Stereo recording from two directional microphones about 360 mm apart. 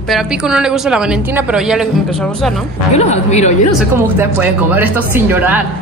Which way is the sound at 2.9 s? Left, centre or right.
Centre.